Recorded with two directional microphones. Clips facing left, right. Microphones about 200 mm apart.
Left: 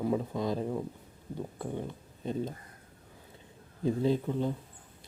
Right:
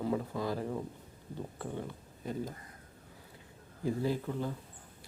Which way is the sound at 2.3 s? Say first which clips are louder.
Left 4 dB; 25° left (ahead or behind).